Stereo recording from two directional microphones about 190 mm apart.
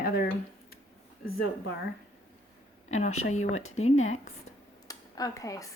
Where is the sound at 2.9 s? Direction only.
35° left (ahead or behind).